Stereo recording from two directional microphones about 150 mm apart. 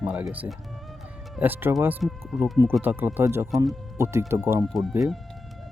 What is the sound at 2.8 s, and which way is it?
Speech, 15° right (ahead or behind).